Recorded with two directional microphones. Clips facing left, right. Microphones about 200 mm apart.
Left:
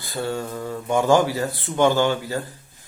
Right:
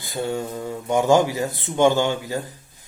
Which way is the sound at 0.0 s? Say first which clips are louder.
Right 1 dB; 20° right (ahead or behind).